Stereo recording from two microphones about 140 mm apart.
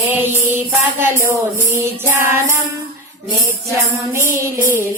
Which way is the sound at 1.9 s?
20° right (ahead or behind).